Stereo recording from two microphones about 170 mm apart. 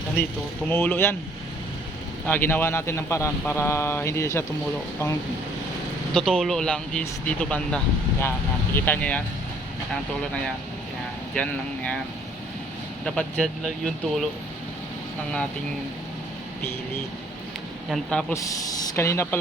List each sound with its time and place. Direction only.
0.7 s speech: 10° left (ahead or behind)
2.2 s speech: 10° left (ahead or behind)
6.1 s speech: centre (ahead or behind)
11.3 s speech: 10° left (ahead or behind)
13.1 s speech: 5° left (ahead or behind)
17.9 s speech: 5° left (ahead or behind)
18.3 s speech: 20° left (ahead or behind)